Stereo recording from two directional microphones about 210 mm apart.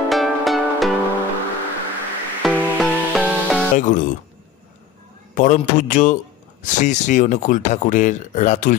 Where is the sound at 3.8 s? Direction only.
35° left (ahead or behind).